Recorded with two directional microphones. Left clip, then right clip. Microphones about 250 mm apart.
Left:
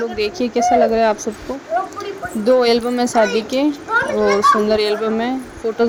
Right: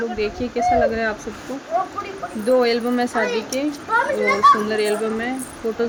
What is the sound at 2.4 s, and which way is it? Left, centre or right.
Speech, left.